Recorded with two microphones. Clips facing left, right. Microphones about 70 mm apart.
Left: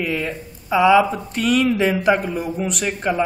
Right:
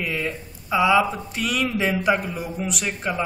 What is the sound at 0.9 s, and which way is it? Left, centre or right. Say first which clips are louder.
A man's voice: left 4 dB; centre.